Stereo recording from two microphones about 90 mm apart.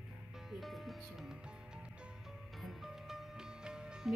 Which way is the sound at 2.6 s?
Centre (ahead or behind).